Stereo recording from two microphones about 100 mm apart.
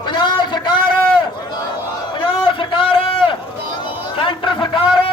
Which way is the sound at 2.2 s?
55° left (ahead or behind).